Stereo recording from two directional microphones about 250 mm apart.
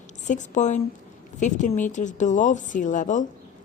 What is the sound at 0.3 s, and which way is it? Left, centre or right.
A woman's voice, left.